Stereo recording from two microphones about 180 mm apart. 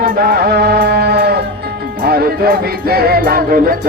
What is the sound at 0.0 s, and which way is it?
Music, 55° right (ahead or behind).